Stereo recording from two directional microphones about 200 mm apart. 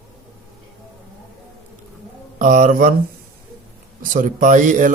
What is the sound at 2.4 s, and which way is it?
Speech, 40° right (ahead or behind).